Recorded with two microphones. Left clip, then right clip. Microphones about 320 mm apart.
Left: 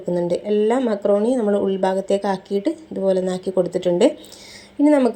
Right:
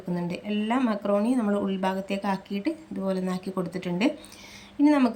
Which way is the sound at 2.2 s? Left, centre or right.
Centre.